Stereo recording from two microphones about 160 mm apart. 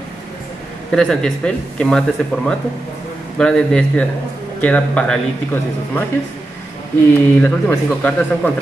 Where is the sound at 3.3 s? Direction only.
5° left (ahead or behind).